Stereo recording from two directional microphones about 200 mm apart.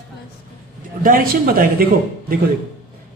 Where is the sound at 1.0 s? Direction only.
45° right (ahead or behind).